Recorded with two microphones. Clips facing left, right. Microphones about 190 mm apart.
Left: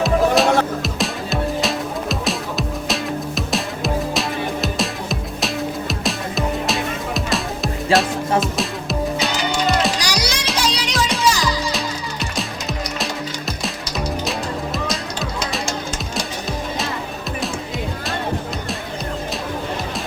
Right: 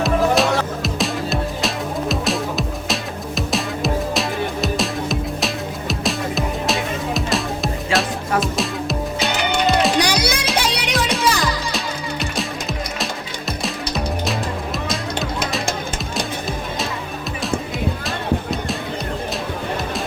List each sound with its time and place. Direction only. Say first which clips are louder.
0.0 s music: left 1 dB; centre (ahead or behind)
9.3 s music: right 5 dB; 60° right (ahead or behind)